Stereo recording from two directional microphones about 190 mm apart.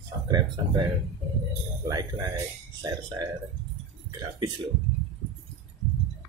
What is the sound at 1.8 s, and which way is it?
Speech, 20° right (ahead or behind).